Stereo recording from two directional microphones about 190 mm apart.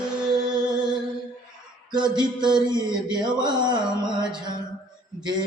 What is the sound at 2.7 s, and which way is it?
Mantra, 25° right (ahead or behind).